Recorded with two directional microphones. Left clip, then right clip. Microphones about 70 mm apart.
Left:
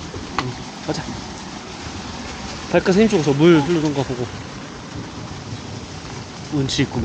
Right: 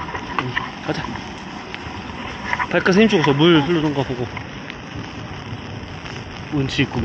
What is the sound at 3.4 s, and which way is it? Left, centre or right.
Speech, centre.